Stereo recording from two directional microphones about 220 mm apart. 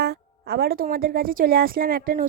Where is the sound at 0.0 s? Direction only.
45° right (ahead or behind).